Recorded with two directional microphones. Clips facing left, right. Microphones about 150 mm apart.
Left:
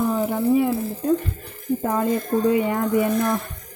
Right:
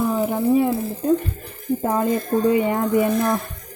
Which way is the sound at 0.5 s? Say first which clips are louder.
Right 1 dB; 35° right (ahead or behind).